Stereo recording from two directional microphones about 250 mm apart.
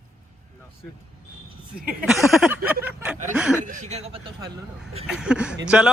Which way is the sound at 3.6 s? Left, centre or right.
Right.